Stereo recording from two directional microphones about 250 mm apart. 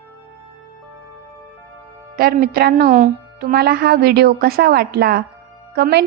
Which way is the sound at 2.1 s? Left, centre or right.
Right.